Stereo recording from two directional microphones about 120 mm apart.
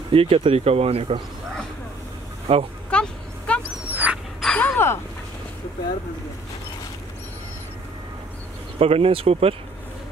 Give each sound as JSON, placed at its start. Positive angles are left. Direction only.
{"t": 0.1, "sound": "speech", "side_deg": -50}
{"t": 2.5, "sound": "speech", "side_deg": -50}
{"t": 2.9, "sound": "vehicle", "side_deg": 10}
{"t": 3.9, "sound": "dog", "side_deg": -15}
{"t": 4.4, "sound": "a sound", "side_deg": 10}
{"t": 8.7, "sound": "speech", "side_deg": -55}